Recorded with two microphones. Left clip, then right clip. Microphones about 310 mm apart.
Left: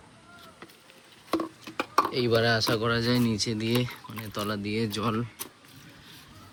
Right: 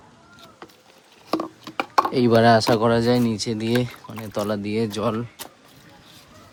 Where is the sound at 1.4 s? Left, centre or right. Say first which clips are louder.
Right 5 dB; right.